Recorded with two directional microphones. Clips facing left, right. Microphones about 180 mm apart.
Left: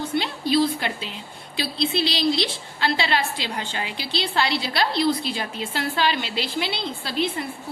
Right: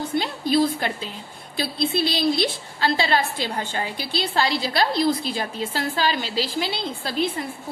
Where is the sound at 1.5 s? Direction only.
50° right (ahead or behind).